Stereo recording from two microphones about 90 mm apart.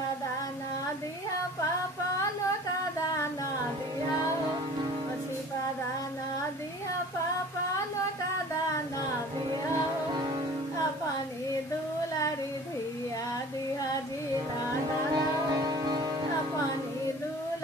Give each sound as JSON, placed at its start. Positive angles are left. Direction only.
{"t": 15.1, "sound": "music", "side_deg": -45}